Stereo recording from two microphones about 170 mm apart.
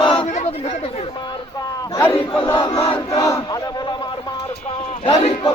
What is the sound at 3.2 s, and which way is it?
Speech, 20° left (ahead or behind).